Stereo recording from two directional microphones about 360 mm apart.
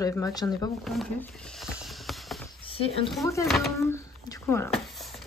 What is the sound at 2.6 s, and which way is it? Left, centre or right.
Speech, centre.